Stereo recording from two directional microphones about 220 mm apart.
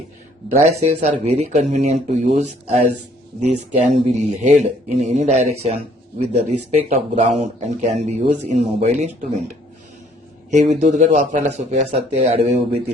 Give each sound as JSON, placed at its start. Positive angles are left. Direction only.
{"t": 0.8, "sound": "speech", "side_deg": -30}
{"t": 10.5, "sound": "speech", "side_deg": -30}